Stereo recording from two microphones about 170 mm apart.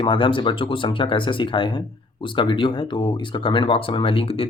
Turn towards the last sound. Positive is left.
turn(degrees=35)  # may be behind; listen again after turning